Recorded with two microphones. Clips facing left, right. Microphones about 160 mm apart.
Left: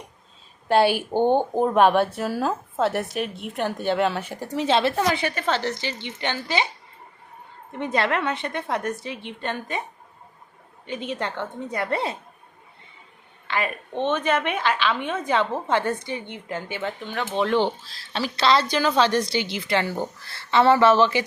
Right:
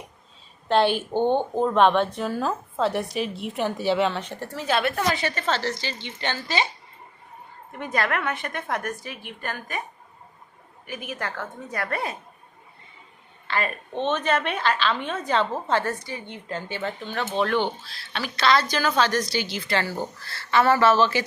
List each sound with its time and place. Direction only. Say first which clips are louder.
0.7 s speech: left 2 dB; 10° left (ahead or behind); by 5.0 s 25° left (ahead or behind)
5.0 s speech: left 1 dB; 10° left (ahead or behind)
7.7 s a woman's voice: left 3 dB; 25° left (ahead or behind)
10.8 s a woman's voice: left 4 dB; 25° left (ahead or behind)
13.5 s speech: left 1 dB; 15° left (ahead or behind)
18.1 s a woman's voice: left 1 dB; 30° left (ahead or behind)